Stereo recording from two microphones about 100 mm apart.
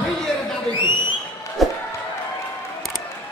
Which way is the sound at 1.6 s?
Centre (ahead or behind).